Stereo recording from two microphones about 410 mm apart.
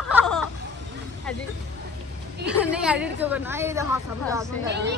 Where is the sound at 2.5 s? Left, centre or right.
Centre.